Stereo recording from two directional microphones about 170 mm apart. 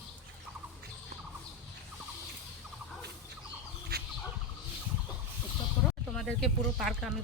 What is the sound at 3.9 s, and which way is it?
Turkey, 70° right (ahead or behind).